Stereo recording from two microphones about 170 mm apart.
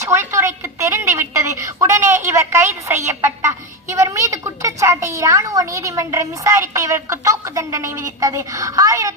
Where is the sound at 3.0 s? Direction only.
15° right (ahead or behind).